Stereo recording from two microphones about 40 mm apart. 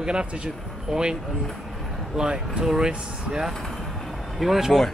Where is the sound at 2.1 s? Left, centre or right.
Centre.